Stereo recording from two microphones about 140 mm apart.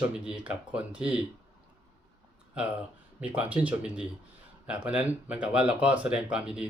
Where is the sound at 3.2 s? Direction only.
10° right (ahead or behind).